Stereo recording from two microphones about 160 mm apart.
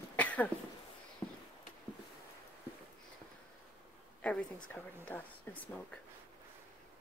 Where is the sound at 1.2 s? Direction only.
20° left (ahead or behind).